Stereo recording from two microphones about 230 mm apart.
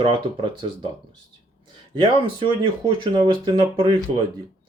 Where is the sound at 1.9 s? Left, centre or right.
Right.